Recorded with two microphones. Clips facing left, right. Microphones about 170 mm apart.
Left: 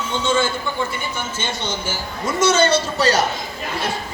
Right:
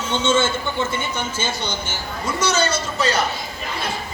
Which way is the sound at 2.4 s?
25° left (ahead or behind).